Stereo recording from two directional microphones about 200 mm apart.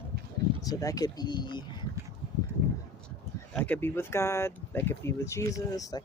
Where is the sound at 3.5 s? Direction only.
10° left (ahead or behind).